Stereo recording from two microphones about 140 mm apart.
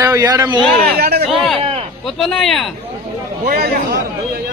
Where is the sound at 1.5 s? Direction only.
45° right (ahead or behind).